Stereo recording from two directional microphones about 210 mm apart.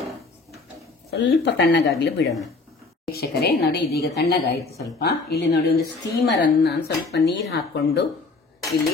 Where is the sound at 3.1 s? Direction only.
50° left (ahead or behind).